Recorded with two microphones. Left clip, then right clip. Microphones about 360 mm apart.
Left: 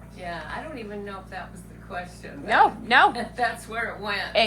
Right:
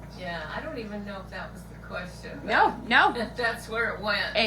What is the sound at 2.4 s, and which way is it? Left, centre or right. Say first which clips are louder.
Speech: left 3 dB; left.